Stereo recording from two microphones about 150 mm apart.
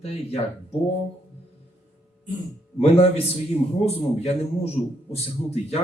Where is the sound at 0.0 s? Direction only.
40° left (ahead or behind).